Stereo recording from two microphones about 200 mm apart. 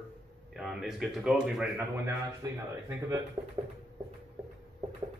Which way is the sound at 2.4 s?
20° right (ahead or behind).